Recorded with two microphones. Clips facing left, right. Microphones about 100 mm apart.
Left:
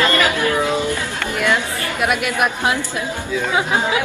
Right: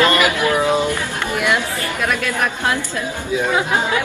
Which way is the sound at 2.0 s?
15° left (ahead or behind).